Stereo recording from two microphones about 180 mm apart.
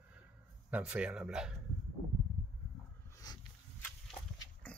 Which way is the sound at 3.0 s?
20° left (ahead or behind).